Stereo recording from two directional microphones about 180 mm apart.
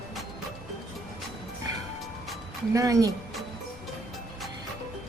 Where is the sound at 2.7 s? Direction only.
20° right (ahead or behind).